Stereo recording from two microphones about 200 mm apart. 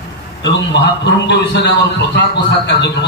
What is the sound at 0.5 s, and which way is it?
A man's voice, 60° left (ahead or behind).